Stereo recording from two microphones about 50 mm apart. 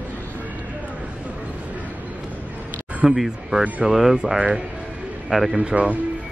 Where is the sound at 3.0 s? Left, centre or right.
Centre.